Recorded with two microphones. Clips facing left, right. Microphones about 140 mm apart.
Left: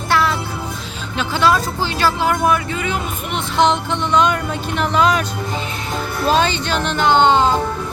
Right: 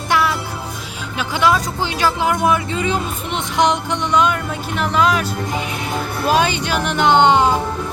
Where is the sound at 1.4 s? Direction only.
15° right (ahead or behind).